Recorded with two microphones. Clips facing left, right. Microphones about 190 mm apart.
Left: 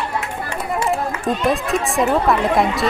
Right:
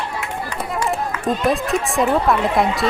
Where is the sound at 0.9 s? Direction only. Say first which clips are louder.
Even; centre (ahead or behind).